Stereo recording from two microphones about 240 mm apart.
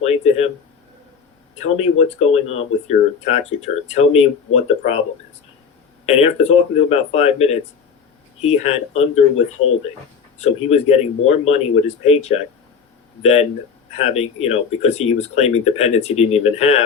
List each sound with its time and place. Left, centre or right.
0.0 s a sound: left
1.5 s speech: left
6.1 s speech: left
10.4 s speech: left